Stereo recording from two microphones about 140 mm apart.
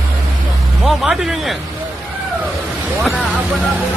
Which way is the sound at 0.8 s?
5° right (ahead or behind).